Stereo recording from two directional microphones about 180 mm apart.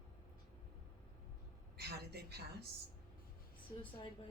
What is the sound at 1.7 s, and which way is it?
Speech, 65° right (ahead or behind).